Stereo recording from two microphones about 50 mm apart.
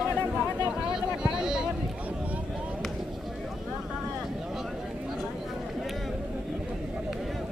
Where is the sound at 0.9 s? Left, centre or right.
Centre.